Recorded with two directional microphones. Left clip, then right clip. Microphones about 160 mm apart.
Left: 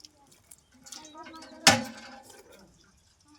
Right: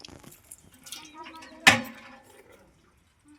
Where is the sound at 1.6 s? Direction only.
25° left (ahead or behind).